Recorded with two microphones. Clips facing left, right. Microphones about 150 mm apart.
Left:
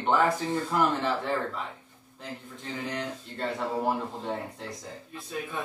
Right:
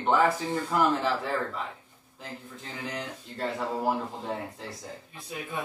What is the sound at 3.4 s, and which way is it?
Speech, 5° right (ahead or behind).